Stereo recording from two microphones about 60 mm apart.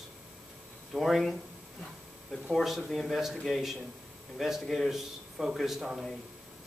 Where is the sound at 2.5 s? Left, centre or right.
Centre.